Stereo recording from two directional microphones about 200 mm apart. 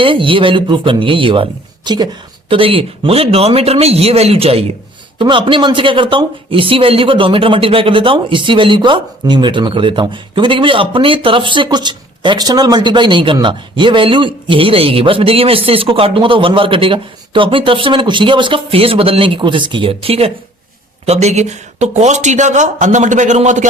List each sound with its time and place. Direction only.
0.0 s speech: 25° right (ahead or behind)